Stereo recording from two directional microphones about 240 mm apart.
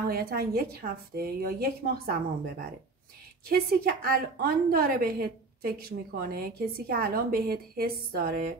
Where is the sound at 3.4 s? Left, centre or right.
Right.